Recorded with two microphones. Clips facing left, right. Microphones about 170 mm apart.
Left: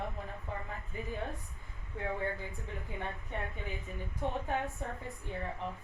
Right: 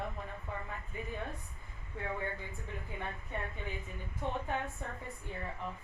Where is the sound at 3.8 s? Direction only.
20° left (ahead or behind).